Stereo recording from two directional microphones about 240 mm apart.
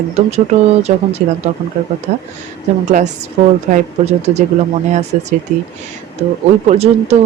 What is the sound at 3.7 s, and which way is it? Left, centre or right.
Speech, right.